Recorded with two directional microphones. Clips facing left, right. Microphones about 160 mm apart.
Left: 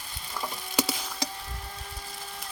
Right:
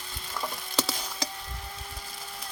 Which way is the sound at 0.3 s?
10° left (ahead or behind).